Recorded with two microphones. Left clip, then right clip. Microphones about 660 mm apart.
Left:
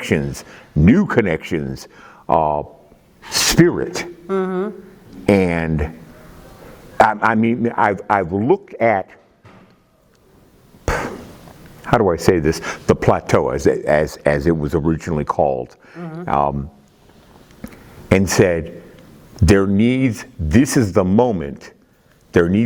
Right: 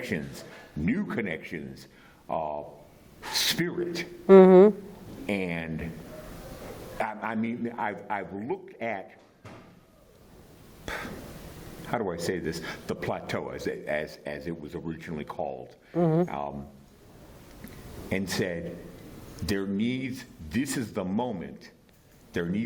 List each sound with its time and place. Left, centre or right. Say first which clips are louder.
0.1 s speech: left 14 dB; left
3.7 s speech: left 11 dB; left
4.3 s speech: right 8 dB; right
5.2 s speech: left 15 dB; left
6.9 s speech: left 18 dB; left
11.9 s speech: left 16 dB; left
16.0 s speech: right 8 dB; right
16.3 s speech: left 17 dB; left
18.1 s speech: left 16 dB; left